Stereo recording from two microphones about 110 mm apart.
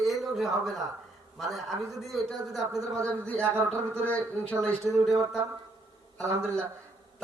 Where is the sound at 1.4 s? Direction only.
Centre (ahead or behind).